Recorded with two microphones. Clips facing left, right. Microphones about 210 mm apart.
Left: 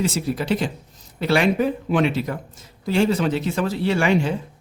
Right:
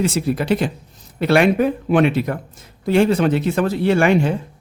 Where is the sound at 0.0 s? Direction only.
60° right (ahead or behind).